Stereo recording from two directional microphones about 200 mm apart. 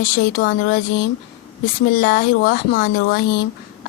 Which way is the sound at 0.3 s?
50° left (ahead or behind).